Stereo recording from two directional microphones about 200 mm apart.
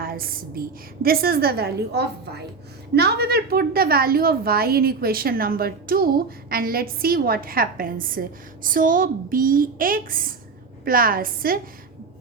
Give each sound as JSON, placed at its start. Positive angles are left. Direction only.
{"t": 0.0, "sound": "a woman's voice", "side_deg": -45}